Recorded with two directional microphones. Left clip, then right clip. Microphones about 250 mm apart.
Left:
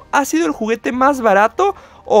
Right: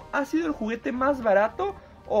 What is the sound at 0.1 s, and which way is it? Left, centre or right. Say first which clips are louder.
Speech: left 11 dB; left.